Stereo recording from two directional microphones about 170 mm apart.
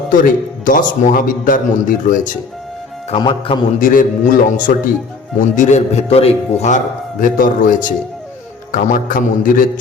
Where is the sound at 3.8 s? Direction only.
50° left (ahead or behind).